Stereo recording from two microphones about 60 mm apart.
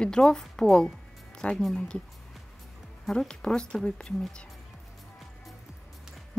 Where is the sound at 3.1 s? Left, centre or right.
Centre.